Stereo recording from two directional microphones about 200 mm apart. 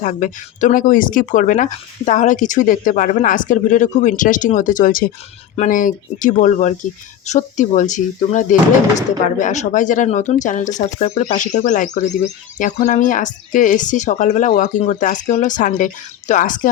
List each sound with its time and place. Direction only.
0.0 s speech: 40° left (ahead or behind)